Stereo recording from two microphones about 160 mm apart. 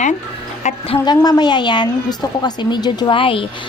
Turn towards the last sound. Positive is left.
turn(degrees=35)  # may be behind; listen again after turning